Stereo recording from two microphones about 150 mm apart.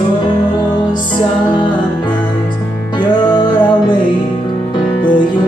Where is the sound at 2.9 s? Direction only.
30° left (ahead or behind).